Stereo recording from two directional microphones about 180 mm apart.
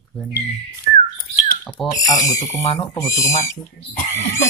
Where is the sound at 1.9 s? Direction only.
20° left (ahead or behind).